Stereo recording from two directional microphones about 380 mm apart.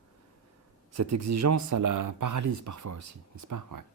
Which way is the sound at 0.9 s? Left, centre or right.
Right.